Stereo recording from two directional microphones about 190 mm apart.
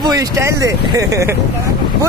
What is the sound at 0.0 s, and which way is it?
Speech, 15° right (ahead or behind).